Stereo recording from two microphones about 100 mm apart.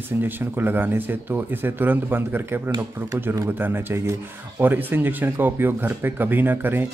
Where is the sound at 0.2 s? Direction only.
20° right (ahead or behind).